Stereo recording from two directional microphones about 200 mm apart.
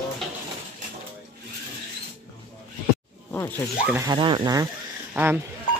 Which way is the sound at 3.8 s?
15° right (ahead or behind).